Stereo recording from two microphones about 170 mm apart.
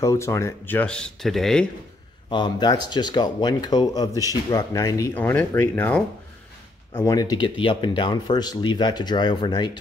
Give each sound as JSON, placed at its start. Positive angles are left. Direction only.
{"t": 0.0, "sound": "speech", "side_deg": 15}
{"t": 2.2, "sound": "speech", "side_deg": 25}